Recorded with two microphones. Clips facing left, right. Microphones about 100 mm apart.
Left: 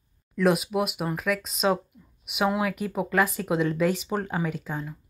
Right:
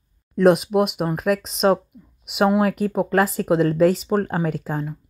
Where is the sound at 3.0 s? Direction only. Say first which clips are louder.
Right 4 dB; 40° right (ahead or behind).